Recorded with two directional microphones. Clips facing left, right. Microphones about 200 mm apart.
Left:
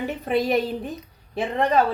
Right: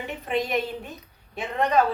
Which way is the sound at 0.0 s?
35° left (ahead or behind).